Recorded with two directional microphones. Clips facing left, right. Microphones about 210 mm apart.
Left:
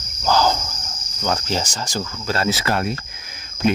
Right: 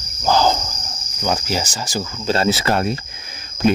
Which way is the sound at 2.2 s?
25° right (ahead or behind).